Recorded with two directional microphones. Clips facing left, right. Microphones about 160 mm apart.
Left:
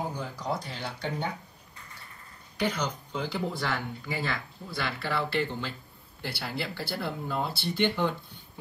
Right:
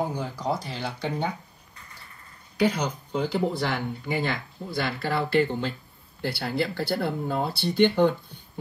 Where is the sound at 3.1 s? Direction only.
60° right (ahead or behind).